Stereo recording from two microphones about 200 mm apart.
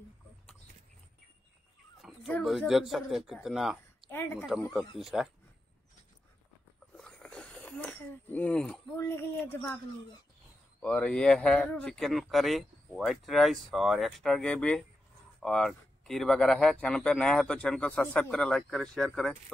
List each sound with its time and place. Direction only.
2.0 s speech: centre (ahead or behind)
4.1 s speech: 10° left (ahead or behind)
4.6 s speech: centre (ahead or behind)
7.0 s a sound: 5° left (ahead or behind)
10.8 s speech: 5° left (ahead or behind)